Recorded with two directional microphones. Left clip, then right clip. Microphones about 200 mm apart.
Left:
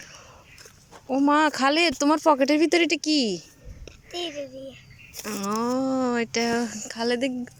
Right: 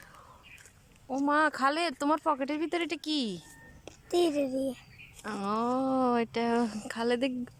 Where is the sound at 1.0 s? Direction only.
10° left (ahead or behind).